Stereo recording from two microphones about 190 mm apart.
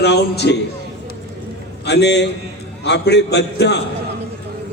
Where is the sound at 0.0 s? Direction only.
65° left (ahead or behind).